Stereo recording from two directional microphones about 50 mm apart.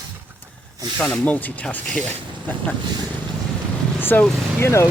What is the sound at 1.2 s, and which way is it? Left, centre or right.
Speech, left.